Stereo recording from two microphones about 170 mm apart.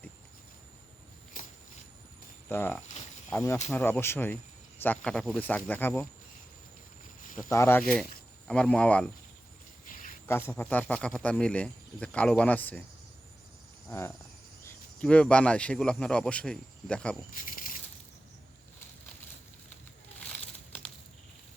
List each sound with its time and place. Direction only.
2.5 s speech: 10° left (ahead or behind)
7.5 s speech: 15° left (ahead or behind)
9.8 s a sound: 55° left (ahead or behind)
10.2 s speech: 15° left (ahead or behind)
14.6 s cricket: 15° left (ahead or behind)
15.0 s speech: 5° left (ahead or behind)
17.4 s a sound: 50° left (ahead or behind)